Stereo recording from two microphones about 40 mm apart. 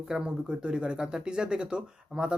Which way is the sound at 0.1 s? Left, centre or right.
Right.